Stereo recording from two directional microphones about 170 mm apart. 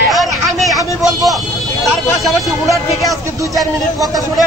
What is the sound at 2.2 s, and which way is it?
Speech, centre (ahead or behind).